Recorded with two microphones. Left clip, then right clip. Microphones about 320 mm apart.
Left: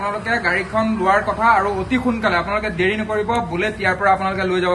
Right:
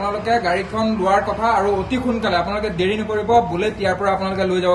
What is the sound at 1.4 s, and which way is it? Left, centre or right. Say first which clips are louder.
A man's voice: left 2 dB; centre.